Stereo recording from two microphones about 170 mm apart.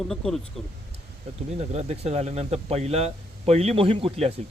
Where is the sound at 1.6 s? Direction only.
40° right (ahead or behind).